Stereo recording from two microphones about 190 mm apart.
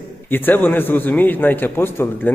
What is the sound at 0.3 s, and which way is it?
A man's voice, 10° left (ahead or behind).